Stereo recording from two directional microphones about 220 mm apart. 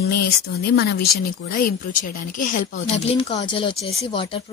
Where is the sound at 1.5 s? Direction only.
40° left (ahead or behind).